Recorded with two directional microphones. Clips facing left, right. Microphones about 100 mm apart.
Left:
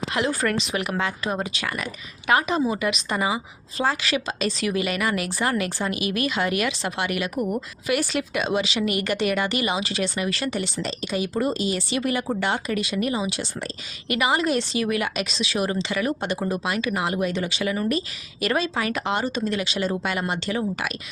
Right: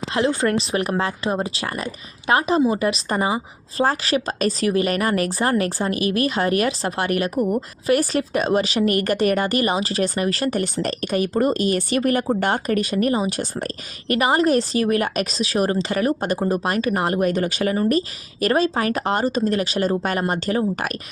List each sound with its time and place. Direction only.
0.1 s a woman's voice: 30° right (ahead or behind)